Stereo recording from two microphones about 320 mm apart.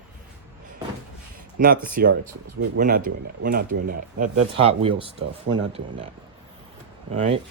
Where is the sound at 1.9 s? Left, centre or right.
Right.